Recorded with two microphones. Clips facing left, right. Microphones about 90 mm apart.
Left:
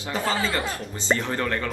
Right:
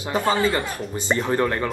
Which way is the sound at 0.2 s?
10° right (ahead or behind).